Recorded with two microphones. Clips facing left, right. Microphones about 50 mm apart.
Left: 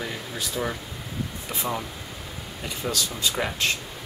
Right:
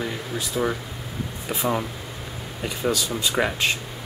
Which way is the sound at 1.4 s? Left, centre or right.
Centre.